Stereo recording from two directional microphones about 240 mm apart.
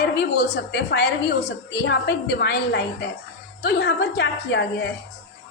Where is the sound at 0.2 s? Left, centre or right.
Left.